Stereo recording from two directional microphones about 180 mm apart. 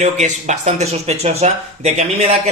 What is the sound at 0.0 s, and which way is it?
Mantra, 40° right (ahead or behind).